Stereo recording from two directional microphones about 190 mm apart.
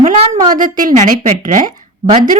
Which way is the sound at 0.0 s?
45° right (ahead or behind).